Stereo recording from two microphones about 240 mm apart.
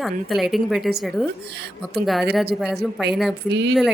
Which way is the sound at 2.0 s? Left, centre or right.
Centre.